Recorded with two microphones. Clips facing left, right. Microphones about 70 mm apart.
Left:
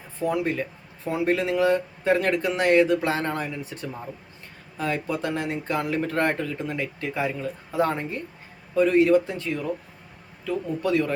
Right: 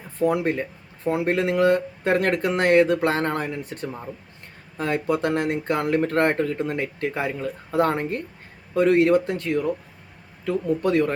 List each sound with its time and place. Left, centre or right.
0.2 s speech: right